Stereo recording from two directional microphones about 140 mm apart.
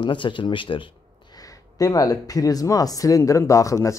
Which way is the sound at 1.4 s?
25° left (ahead or behind).